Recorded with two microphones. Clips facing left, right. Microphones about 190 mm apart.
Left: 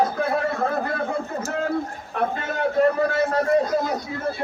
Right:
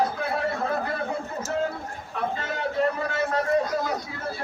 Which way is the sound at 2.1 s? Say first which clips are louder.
Left 4 dB; 55° left (ahead or behind).